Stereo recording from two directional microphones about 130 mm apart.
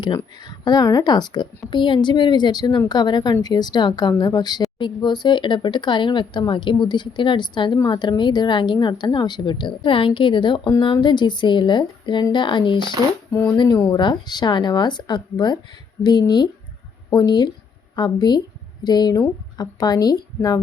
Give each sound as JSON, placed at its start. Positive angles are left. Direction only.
{"t": 0.0, "sound": "a woman's voice", "side_deg": 35}
{"t": 13.3, "sound": "a woman's voice", "side_deg": 20}